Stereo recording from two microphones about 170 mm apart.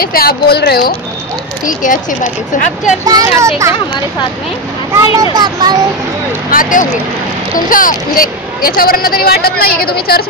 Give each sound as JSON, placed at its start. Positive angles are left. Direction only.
{"t": 0.0, "sound": "speech", "side_deg": 60}
{"t": 1.7, "sound": "speech", "side_deg": 50}
{"t": 3.1, "sound": "speech", "side_deg": -20}
{"t": 4.9, "sound": "a child's voice", "side_deg": -20}
{"t": 6.5, "sound": "speech", "side_deg": 50}